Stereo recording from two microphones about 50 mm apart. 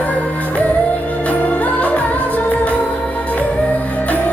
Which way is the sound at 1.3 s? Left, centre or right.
Left.